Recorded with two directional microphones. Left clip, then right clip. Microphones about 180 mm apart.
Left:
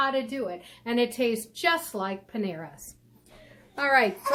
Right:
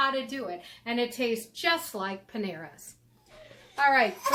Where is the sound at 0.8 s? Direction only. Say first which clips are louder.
Left 4 dB; 35° left (ahead or behind).